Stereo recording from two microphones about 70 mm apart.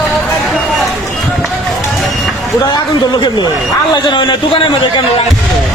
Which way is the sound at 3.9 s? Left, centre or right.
Left.